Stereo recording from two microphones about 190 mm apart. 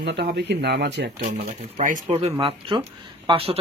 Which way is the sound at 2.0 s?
30° right (ahead or behind).